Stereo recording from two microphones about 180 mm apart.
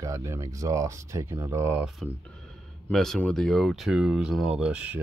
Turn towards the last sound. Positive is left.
turn(degrees=-5)  # may be behind; listen again after turning